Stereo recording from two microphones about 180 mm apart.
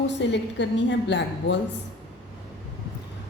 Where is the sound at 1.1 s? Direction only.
70° left (ahead or behind).